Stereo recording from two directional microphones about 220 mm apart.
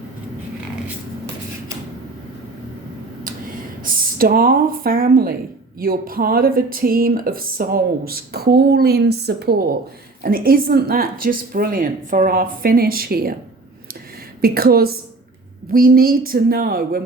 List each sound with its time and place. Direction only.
3.8 s a woman's voice: 40° right (ahead or behind)
14.4 s a woman's voice: 45° right (ahead or behind)